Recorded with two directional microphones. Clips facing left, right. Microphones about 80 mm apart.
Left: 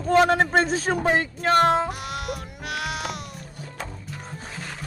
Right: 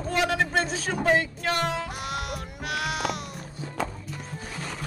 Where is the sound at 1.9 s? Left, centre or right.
Centre.